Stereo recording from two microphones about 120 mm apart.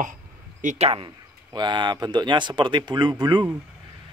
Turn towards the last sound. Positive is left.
turn(degrees=-40)  # may be behind; listen again after turning